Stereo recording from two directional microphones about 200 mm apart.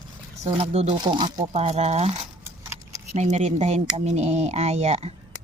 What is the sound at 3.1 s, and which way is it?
Speech, 35° right (ahead or behind).